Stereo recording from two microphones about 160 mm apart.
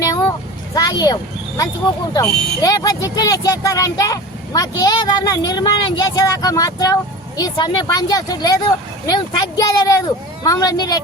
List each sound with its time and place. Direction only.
0.7 s speech: 25° left (ahead or behind)